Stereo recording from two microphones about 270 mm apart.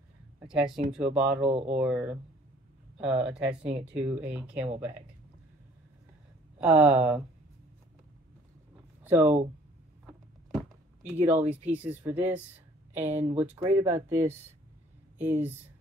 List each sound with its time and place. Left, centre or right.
0.5 s speech: centre
1.5 s speech: right
1.8 s speech: centre
6.6 s speech: centre
9.0 s speech: centre
11.1 s speech: centre
15.1 s speech: centre